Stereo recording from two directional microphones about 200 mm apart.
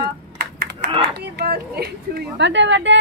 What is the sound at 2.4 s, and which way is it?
Speech, 65° right (ahead or behind).